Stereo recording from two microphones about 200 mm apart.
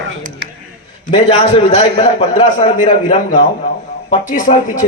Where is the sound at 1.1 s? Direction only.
25° left (ahead or behind).